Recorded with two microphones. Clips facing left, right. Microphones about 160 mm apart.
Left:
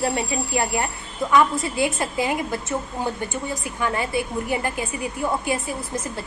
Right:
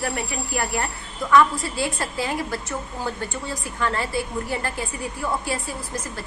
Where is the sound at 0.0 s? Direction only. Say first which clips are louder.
Left 4 dB; 20° left (ahead or behind).